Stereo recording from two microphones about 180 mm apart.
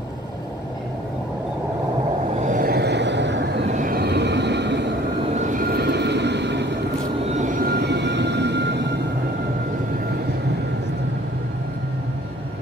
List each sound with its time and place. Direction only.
2.4 s vehicle: 50° right (ahead or behind); by 3.4 s 75° right (ahead or behind)
3.7 s train: 55° right (ahead or behind); by 4.8 s 70° right (ahead or behind)
5.4 s vehicle: 50° right (ahead or behind); by 6.7 s 75° right (ahead or behind)
7.3 s vehicle: 45° right (ahead or behind); by 9.0 s 70° right (ahead or behind)